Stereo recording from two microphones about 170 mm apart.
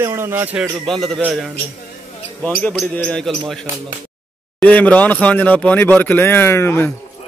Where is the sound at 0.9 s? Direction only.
Centre (ahead or behind).